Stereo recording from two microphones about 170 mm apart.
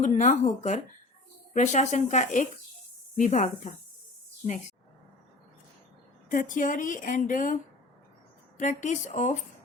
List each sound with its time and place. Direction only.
0.0 s a woman's voice: 45° left (ahead or behind)
6.2 s a woman's voice: 55° left (ahead or behind)